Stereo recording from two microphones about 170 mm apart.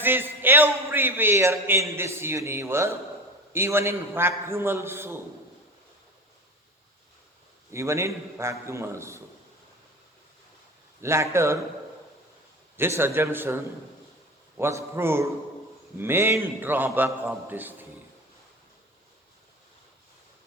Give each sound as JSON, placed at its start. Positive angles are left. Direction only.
{"t": 0.0, "sound": "a man's voice", "side_deg": -10}
{"t": 7.7, "sound": "a man's voice", "side_deg": -15}
{"t": 11.0, "sound": "a man's voice", "side_deg": -15}
{"t": 12.7, "sound": "a man's voice", "side_deg": -15}